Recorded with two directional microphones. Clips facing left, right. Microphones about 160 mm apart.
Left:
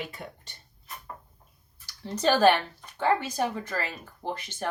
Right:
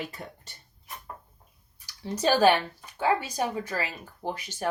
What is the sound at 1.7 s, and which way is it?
Speech, 10° right (ahead or behind).